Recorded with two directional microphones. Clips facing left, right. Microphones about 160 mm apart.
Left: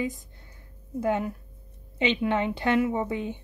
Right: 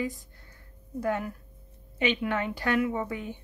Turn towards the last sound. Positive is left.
turn(degrees=20)  # may be behind; listen again after turning